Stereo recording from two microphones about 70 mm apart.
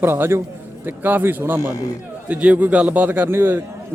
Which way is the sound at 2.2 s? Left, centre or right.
Centre.